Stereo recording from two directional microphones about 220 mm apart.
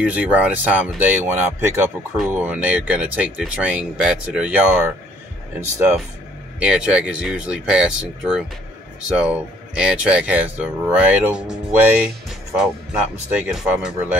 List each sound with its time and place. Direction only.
0.0 s speech: 5° right (ahead or behind)
9.8 s speech: 5° right (ahead or behind)
13.3 s speech: 5° right (ahead or behind)